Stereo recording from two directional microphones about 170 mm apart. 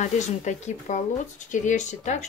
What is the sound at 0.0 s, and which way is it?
Speech, 45° left (ahead or behind).